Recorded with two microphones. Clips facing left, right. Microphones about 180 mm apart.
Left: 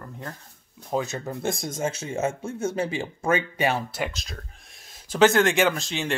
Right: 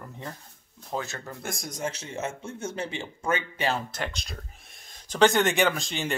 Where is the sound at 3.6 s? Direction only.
10° left (ahead or behind).